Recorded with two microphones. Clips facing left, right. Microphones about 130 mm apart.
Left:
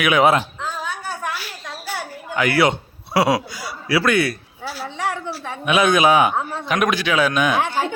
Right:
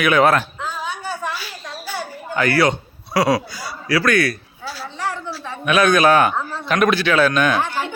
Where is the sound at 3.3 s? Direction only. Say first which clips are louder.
Even; 20° left (ahead or behind).